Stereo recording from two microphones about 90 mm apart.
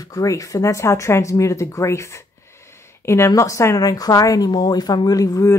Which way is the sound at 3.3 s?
35° left (ahead or behind).